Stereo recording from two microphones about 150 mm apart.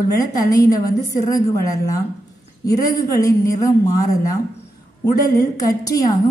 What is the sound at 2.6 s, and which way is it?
A woman's voice, 25° left (ahead or behind).